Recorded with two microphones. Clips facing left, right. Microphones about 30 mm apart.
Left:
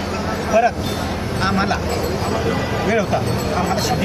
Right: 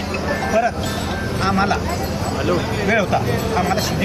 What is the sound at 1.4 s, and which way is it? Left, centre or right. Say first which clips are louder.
Speech: right 1 dB; centre.